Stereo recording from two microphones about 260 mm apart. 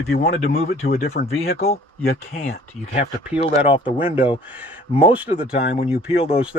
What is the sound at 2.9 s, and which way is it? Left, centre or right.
Speech, left.